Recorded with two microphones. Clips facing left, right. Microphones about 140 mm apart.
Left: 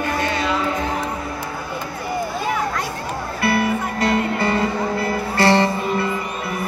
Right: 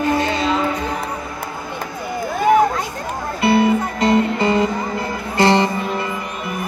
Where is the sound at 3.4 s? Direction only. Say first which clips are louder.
Right 5 dB; 20° right (ahead or behind).